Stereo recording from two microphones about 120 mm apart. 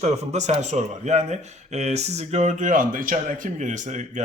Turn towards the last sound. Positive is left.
turn(degrees=-85)